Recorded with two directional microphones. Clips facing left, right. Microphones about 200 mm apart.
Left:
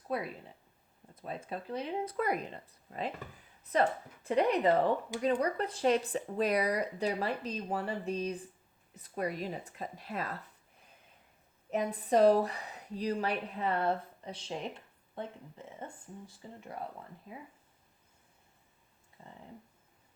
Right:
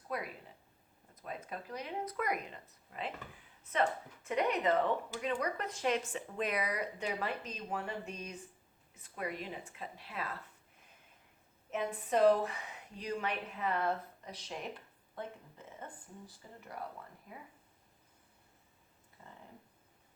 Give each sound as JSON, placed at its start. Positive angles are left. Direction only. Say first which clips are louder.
{"t": 0.1, "sound": "a woman's voice", "louder": "left 4 dB", "side_deg": 30}
{"t": 11.7, "sound": "a woman's voice", "louder": "left 5 dB", "side_deg": 35}
{"t": 19.2, "sound": "speech", "louder": "left 3 dB", "side_deg": 30}